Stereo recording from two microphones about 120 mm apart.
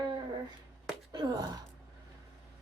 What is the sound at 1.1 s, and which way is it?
Speech, 35° right (ahead or behind).